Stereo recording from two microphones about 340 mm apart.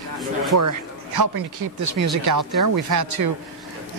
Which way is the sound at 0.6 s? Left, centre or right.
Right.